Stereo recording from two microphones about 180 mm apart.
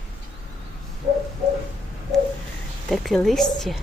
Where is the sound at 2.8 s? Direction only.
Centre (ahead or behind).